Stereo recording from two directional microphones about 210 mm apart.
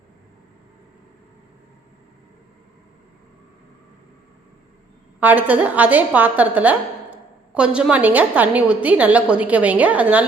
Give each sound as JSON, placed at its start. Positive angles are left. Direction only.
{"t": 5.2, "sound": "a woman's voice", "side_deg": -10}